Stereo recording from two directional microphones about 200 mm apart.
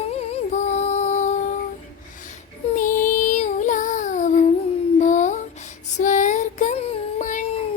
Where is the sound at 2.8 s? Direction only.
40° left (ahead or behind).